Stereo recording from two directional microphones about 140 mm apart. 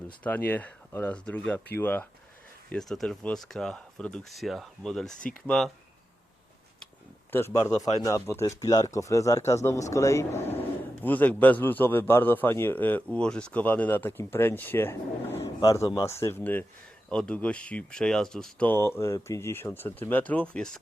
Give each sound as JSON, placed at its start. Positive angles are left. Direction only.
{"t": 0.2, "sound": "speech", "side_deg": 10}
{"t": 2.6, "sound": "speech", "side_deg": 5}
{"t": 7.3, "sound": "speech", "side_deg": 20}